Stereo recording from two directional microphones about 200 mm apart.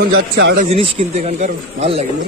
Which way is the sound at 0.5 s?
30° right (ahead or behind).